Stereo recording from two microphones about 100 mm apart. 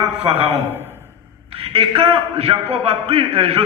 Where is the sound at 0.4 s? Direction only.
20° right (ahead or behind).